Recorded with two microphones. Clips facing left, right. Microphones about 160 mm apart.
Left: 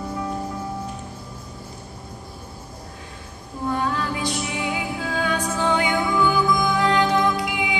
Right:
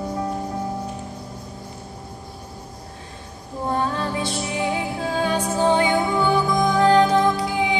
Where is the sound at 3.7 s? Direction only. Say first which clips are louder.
Right 1 dB; 30° right (ahead or behind).